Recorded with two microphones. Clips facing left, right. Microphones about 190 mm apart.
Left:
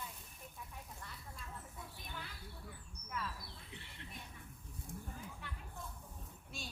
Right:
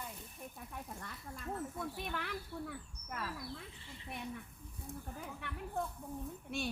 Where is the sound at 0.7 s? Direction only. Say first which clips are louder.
Right 6 dB; 60° right (ahead or behind).